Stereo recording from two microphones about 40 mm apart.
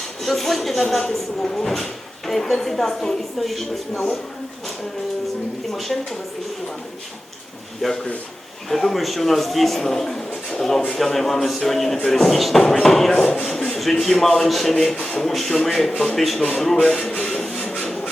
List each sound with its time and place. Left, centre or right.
0.0 s speech: centre
5.7 s speech: centre
7.8 s speech: centre
17.2 s printer: centre